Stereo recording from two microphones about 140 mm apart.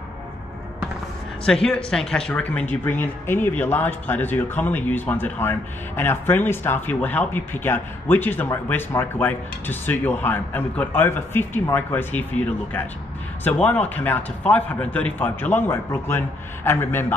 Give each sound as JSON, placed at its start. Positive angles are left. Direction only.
{"t": 1.4, "sound": "speech", "side_deg": 5}